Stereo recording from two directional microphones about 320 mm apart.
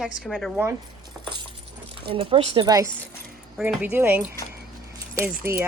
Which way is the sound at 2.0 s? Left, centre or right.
Centre.